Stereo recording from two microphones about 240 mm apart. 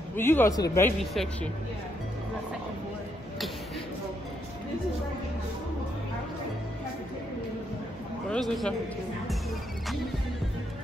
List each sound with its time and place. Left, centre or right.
0.1 s speech: centre
8.3 s a man's voice: centre